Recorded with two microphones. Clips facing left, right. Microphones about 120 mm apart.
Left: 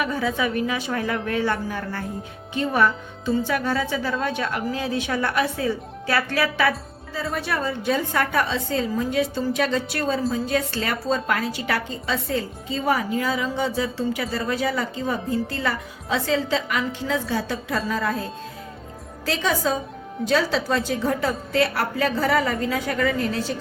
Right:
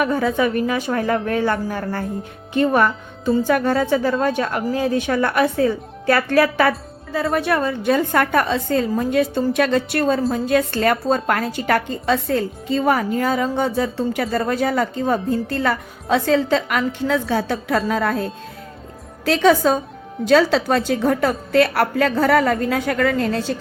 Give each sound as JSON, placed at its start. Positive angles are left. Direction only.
{"t": 0.0, "sound": "speech", "side_deg": -45}
{"t": 2.5, "sound": "a woman's voice", "side_deg": -55}